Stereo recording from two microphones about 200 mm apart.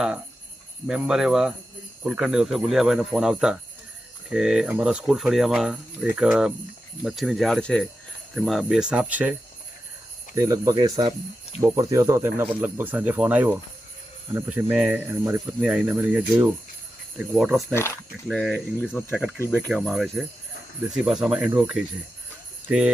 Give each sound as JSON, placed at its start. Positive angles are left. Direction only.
{"t": 0.9, "sound": "speech", "side_deg": -5}
{"t": 10.3, "sound": "speech", "side_deg": -15}
{"t": 19.7, "sound": "speech", "side_deg": 0}